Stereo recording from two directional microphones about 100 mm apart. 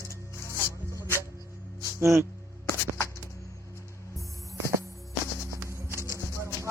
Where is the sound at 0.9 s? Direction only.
25° right (ahead or behind).